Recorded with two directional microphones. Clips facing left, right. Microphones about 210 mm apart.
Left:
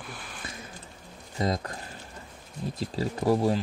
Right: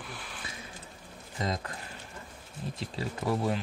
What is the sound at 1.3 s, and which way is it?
Speech, 35° left (ahead or behind).